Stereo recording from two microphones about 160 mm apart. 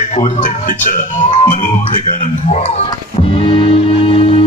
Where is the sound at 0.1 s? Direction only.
50° left (ahead or behind).